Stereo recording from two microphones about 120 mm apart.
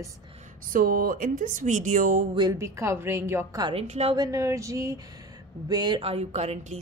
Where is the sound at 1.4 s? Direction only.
90° right.